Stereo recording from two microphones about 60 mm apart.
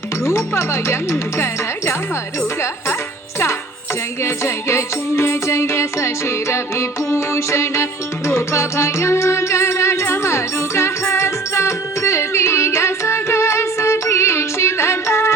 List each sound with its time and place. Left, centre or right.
0.3 s music: left
4.2 s music: left